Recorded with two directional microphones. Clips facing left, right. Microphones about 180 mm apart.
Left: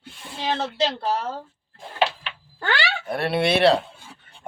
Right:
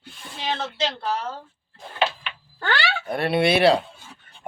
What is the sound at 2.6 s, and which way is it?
Speech, 5° left (ahead or behind).